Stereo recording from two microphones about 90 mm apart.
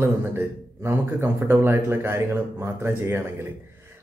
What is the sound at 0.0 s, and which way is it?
Speech, 30° right (ahead or behind).